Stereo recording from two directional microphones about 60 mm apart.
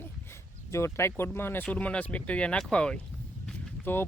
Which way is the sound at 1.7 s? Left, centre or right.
Left.